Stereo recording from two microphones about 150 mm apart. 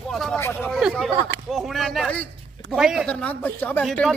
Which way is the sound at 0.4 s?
15° left (ahead or behind).